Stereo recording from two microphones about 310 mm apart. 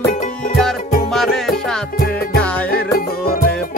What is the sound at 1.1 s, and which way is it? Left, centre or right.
Music, centre.